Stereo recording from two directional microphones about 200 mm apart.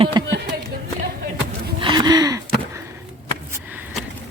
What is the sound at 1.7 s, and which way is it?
Gasp, 25° right (ahead or behind).